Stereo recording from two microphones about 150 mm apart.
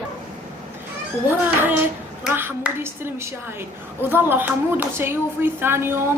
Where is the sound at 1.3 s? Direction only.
15° right (ahead or behind).